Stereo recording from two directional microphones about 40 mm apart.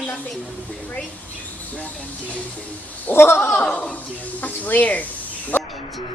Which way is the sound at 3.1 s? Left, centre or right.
Left.